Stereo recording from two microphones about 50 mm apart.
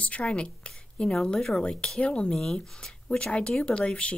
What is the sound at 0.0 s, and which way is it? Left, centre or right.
A woman's voice, left.